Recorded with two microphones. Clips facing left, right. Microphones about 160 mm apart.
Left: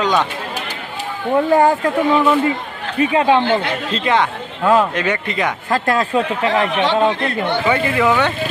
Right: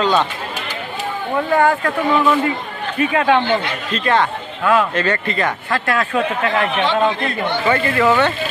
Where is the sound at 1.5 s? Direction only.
30° left (ahead or behind).